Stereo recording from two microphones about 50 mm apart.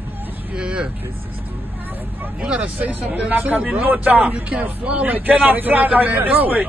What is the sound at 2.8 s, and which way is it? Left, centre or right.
Speech, right.